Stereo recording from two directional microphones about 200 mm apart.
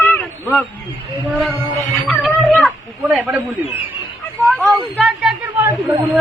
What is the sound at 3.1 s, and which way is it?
Speech, centre (ahead or behind).